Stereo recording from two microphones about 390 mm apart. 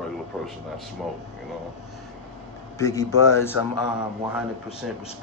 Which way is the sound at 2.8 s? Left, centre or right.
Centre.